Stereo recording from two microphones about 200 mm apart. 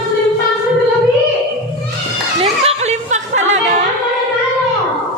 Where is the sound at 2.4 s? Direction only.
35° right (ahead or behind).